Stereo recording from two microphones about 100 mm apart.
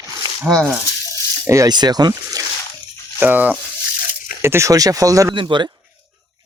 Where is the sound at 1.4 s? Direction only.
30° right (ahead or behind).